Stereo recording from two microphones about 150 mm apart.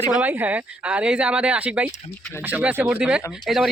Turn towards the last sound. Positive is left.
turn(degrees=0)  # may be behind; listen again after turning